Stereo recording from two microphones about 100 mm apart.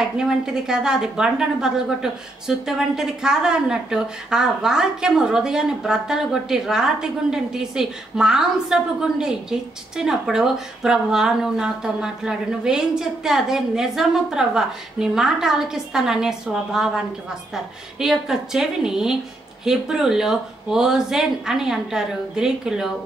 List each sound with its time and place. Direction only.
0.0 s a woman's voice: 5° right (ahead or behind)